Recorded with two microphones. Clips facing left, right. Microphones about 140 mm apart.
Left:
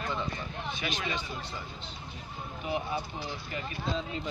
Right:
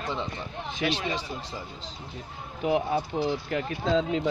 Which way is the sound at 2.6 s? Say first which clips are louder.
Right 8 dB; 90° right.